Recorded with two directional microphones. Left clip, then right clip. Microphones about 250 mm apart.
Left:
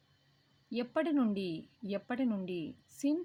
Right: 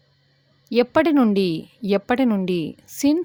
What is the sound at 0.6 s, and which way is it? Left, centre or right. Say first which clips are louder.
A woman's voice: right 17 dB; right.